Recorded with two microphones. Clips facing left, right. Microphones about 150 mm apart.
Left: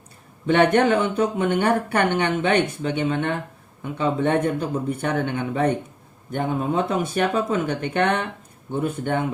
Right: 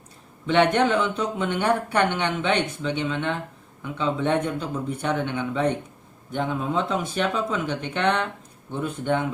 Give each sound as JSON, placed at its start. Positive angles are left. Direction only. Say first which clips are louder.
{"t": 0.4, "sound": "speech", "louder": "left 2 dB", "side_deg": 55}